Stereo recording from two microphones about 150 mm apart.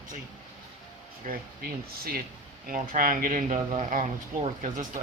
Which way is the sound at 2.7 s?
65° right (ahead or behind).